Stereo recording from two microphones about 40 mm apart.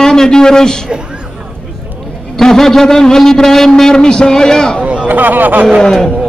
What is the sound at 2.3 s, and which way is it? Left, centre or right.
A man's voice, centre.